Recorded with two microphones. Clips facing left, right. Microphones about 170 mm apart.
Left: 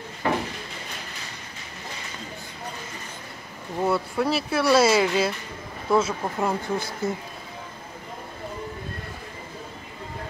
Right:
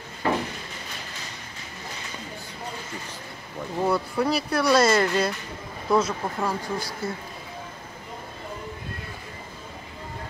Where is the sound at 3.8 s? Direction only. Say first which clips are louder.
Even; 5° left (ahead or behind).